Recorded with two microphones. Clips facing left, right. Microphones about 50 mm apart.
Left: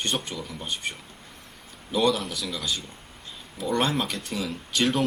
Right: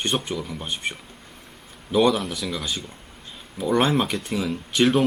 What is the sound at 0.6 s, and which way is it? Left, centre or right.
Speech, centre.